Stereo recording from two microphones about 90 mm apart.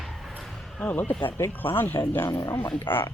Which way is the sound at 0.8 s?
20° left (ahead or behind).